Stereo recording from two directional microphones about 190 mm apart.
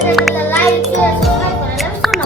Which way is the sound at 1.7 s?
Centre (ahead or behind).